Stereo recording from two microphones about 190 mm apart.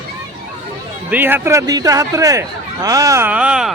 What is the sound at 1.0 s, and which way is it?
Speech, 10° right (ahead or behind).